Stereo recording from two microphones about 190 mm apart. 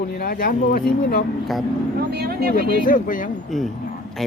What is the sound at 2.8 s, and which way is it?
Speech, 45° left (ahead or behind).